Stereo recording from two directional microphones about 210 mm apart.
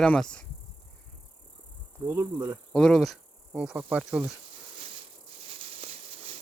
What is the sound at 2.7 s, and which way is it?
Speech, 5° left (ahead or behind).